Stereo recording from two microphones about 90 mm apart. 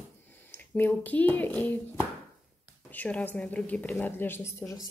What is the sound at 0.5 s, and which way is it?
A woman's voice, 20° left (ahead or behind).